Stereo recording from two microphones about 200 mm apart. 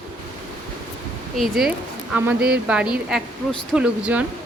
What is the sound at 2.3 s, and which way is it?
Speech, 50° right (ahead or behind).